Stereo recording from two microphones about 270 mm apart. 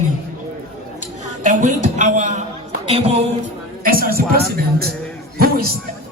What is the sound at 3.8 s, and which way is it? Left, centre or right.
Speech, right.